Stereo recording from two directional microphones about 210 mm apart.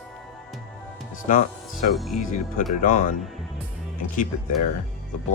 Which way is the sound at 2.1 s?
40° left (ahead or behind).